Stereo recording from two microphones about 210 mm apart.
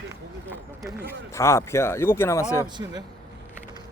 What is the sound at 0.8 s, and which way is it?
Speech, 10° right (ahead or behind).